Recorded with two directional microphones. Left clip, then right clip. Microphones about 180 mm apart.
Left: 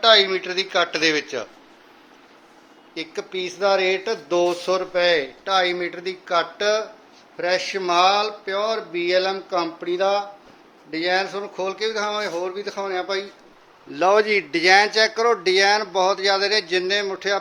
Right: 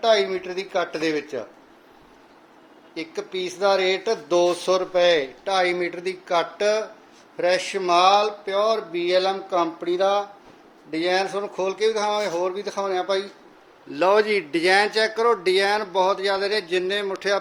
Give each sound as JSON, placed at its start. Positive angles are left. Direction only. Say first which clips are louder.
{"t": 0.0, "sound": "speech", "louder": "left 4 dB", "side_deg": -10}
{"t": 2.9, "sound": "speech", "louder": "left 1 dB", "side_deg": -5}
{"t": 13.9, "sound": "speech", "louder": "left 1 dB", "side_deg": 0}